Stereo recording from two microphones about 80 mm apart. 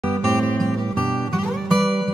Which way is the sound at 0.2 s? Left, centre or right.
Centre.